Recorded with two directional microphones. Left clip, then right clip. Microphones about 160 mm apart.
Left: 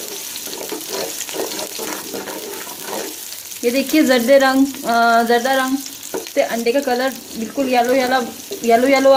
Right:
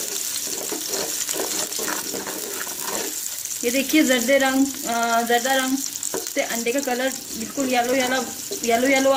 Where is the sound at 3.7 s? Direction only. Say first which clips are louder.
Left 4 dB; 15° left (ahead or behind).